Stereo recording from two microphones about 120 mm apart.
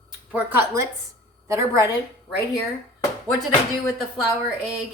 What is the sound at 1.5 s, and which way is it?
Speech, 25° right (ahead or behind).